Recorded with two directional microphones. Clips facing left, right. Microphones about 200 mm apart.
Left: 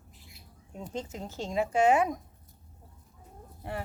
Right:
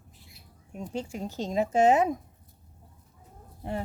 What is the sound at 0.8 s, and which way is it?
Speech, 10° right (ahead or behind).